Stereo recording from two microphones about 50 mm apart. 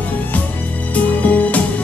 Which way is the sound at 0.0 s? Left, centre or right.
Left.